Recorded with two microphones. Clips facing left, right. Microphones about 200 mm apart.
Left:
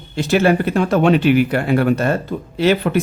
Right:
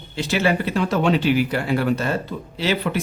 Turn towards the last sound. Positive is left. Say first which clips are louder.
# left 7 dB
turn(degrees=55)  # may be behind; listen again after turning